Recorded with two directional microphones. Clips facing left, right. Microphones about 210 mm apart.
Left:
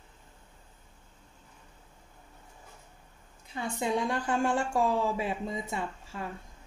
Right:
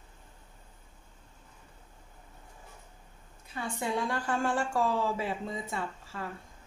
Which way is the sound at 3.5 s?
20° left (ahead or behind).